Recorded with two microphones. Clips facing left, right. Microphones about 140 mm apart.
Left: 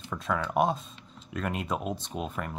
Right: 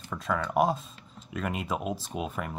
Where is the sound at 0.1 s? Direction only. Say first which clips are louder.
Even; centre (ahead or behind).